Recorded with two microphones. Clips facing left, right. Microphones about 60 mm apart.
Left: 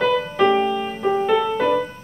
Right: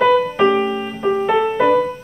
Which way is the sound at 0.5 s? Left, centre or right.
Right.